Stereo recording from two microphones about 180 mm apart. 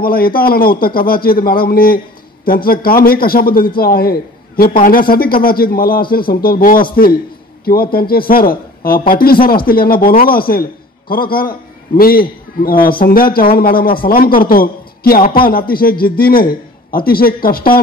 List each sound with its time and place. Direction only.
0.0 s a man's voice: 55° left (ahead or behind)